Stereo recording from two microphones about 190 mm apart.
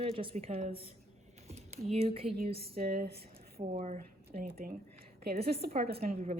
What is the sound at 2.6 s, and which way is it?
Speech, 55° right (ahead or behind).